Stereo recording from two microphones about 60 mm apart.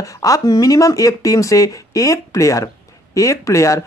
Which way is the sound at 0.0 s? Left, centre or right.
Left.